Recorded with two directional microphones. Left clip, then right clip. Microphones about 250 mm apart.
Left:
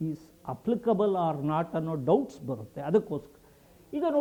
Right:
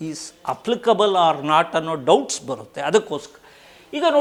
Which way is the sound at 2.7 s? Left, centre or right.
Centre.